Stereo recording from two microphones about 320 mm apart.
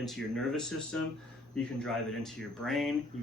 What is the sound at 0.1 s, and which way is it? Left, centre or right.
Speech, centre.